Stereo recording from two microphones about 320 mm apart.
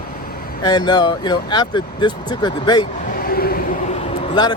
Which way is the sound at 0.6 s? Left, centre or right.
Centre.